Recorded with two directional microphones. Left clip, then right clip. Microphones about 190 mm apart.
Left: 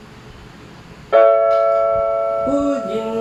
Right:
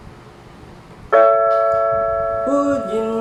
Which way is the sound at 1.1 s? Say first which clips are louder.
Left 1 dB; 15° right (ahead or behind).